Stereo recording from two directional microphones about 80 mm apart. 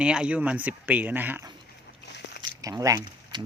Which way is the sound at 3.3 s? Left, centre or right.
Right.